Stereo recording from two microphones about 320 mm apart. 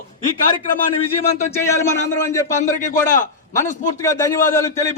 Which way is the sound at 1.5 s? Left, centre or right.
Centre.